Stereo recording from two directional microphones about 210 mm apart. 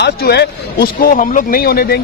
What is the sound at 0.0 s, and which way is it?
Speech, 50° left (ahead or behind).